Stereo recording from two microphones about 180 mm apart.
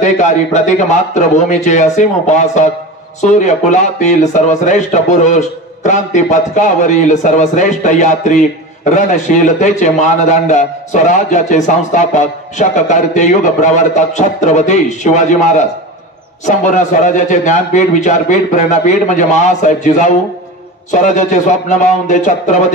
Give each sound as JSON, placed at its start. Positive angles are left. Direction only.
{"t": 0.0, "sound": "a man's voice", "side_deg": 40}